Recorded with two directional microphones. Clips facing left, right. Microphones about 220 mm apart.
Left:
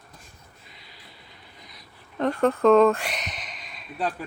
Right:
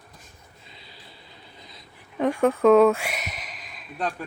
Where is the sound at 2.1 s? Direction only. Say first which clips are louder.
Right 1 dB; 10° right (ahead or behind).